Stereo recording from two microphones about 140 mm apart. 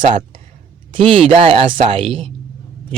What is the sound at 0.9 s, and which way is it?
Speech, 40° right (ahead or behind).